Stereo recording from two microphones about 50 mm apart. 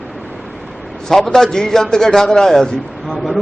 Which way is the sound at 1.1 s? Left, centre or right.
Centre.